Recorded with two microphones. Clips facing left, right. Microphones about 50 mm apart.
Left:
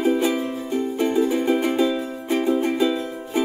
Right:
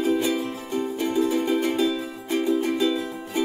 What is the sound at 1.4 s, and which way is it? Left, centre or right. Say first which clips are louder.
Music: left 3 dB; centre.